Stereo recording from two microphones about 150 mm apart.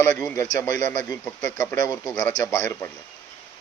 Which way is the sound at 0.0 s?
10° left (ahead or behind).